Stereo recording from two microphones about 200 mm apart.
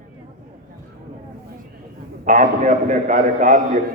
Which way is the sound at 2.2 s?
40° right (ahead or behind).